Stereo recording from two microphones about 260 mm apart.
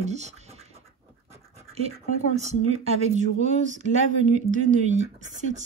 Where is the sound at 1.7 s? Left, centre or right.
Right.